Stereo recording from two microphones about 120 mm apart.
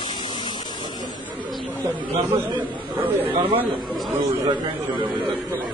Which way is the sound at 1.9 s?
40° right (ahead or behind).